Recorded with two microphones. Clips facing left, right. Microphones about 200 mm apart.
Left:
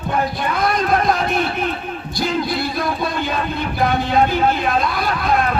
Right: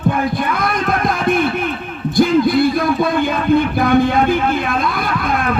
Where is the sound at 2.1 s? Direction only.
55° right (ahead or behind).